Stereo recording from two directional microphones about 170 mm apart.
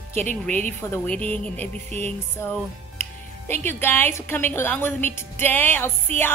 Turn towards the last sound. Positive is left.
turn(degrees=10)  # may be behind; listen again after turning